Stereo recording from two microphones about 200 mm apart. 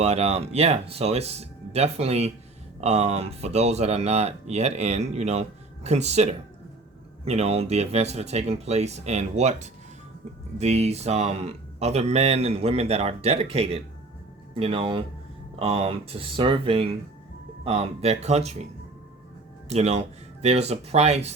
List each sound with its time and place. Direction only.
0.0 s speech: 30° right (ahead or behind)
19.6 s speech: 35° right (ahead or behind)